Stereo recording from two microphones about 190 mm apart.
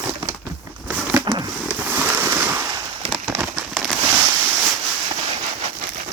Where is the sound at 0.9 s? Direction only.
5° right (ahead or behind).